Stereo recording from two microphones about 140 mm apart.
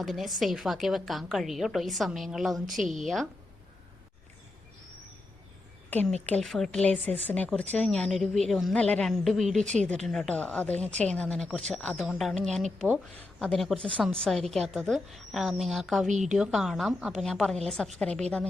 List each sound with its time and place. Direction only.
0.0 s a woman's voice: centre (ahead or behind)
5.9 s a woman's voice: 10° left (ahead or behind)
16.0 s speech: 60° right (ahead or behind)
16.3 s a woman's voice: centre (ahead or behind)